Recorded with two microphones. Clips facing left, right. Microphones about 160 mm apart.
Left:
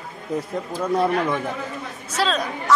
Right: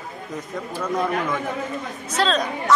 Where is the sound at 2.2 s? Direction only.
10° left (ahead or behind).